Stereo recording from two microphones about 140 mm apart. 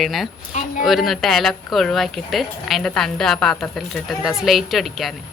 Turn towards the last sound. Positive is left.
turn(degrees=0)  # may be behind; listen again after turning